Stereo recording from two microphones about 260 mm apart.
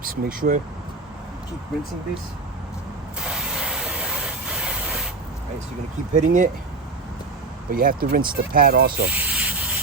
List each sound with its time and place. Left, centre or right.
0.0 s speech: right
3.2 s mechanisms: centre
4.4 s a sound: centre
6.1 s speech: right
7.7 s speech: right
9.0 s a sound: centre